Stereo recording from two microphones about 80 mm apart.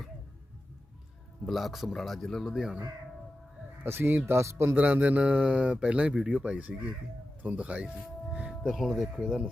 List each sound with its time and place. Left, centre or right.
1.5 s speech: centre
3.8 s speech: right
4.7 s speech: centre